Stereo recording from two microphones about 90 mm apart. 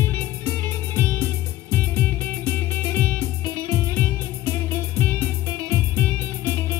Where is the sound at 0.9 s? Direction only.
25° left (ahead or behind).